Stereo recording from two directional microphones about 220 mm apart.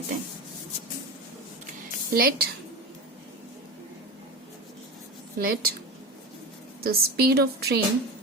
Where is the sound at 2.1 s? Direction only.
40° right (ahead or behind).